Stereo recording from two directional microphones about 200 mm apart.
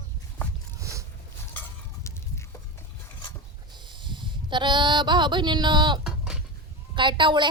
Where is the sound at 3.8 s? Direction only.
25° right (ahead or behind).